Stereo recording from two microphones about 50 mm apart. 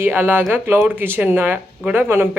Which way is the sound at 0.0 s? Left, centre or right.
Right.